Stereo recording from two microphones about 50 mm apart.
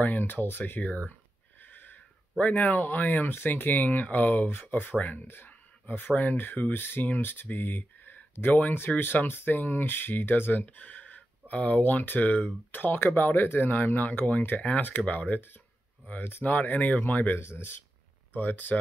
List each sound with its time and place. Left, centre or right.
0.0 s speech: left
5.2 s speech: left
10.6 s speech: left